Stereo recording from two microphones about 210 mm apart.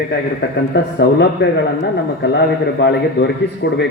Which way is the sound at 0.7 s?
55° left (ahead or behind).